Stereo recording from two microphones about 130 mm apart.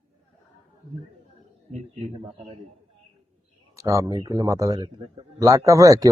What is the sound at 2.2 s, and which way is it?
Speech, 45° right (ahead or behind).